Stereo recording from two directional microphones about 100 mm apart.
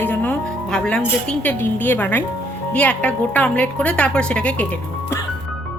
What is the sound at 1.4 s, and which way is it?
A woman's voice, 20° left (ahead or behind).